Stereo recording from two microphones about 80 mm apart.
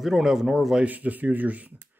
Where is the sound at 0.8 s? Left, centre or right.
Right.